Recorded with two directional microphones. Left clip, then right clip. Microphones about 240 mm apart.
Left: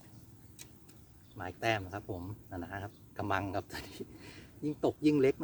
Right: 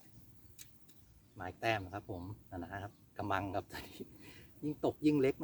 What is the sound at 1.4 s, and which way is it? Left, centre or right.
Speech, centre.